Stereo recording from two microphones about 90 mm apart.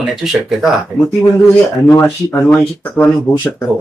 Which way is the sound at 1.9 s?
25° left (ahead or behind).